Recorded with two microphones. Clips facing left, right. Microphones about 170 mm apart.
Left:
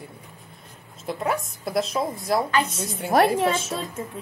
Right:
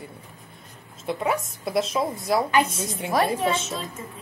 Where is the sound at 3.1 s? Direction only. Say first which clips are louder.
Left 4 dB; 70° left (ahead or behind).